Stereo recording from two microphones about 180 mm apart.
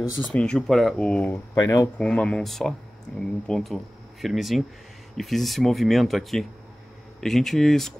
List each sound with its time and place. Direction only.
0.3 s speech: 5° left (ahead or behind)
1.5 s speech: 20° left (ahead or behind)
2.0 s speech: 5° left (ahead or behind)